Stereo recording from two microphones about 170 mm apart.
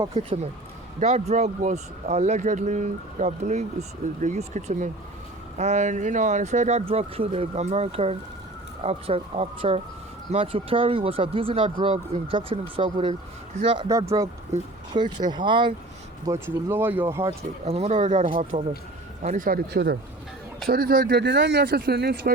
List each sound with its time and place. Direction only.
0.1 s speech: 35° right (ahead or behind)
14.9 s speech: 25° right (ahead or behind)
16.2 s speech: 15° right (ahead or behind)
17.7 s speech: 35° right (ahead or behind); by 22.3 s 80° right